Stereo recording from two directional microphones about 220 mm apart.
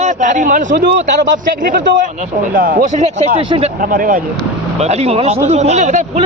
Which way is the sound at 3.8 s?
40° right (ahead or behind).